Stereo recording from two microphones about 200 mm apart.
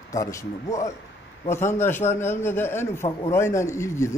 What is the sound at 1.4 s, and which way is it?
A man's voice, 10° left (ahead or behind).